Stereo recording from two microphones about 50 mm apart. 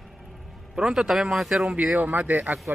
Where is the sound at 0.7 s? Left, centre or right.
Centre.